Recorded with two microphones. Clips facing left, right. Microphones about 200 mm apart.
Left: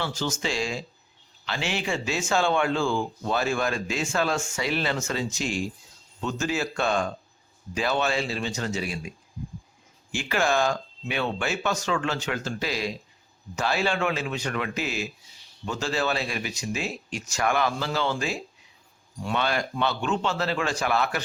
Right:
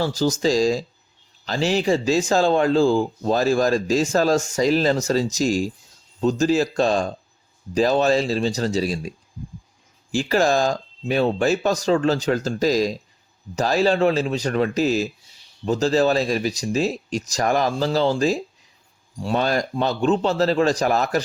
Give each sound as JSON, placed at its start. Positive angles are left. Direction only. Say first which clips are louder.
{"t": 0.0, "sound": "speech", "louder": "right 9 dB", "side_deg": -35}